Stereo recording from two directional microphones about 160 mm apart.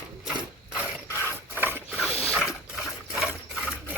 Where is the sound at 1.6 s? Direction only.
15° right (ahead or behind).